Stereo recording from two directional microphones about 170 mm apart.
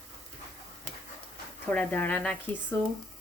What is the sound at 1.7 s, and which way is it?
Speech, 10° left (ahead or behind).